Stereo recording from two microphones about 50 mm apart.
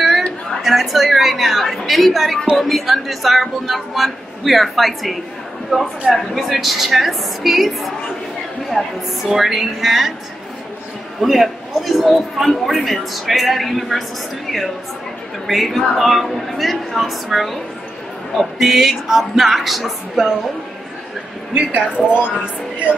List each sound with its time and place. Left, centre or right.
0.6 s a sound: centre
2.5 s a man's voice: centre
11.1 s a man's voice: centre
15.4 s a man's voice: centre
21.5 s a woman's voice: right